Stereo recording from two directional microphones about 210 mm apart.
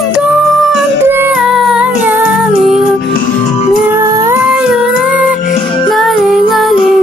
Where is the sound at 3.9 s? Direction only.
15° right (ahead or behind).